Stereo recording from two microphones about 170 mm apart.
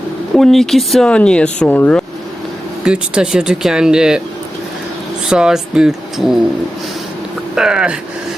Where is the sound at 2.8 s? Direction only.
5° right (ahead or behind).